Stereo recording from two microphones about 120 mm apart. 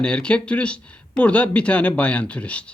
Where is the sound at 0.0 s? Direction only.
10° left (ahead or behind).